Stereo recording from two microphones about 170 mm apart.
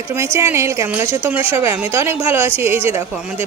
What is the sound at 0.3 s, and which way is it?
A woman's voice, 15° right (ahead or behind).